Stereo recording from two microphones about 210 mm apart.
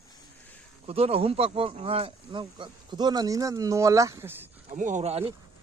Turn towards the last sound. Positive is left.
turn(degrees=-30)  # may be behind; listen again after turning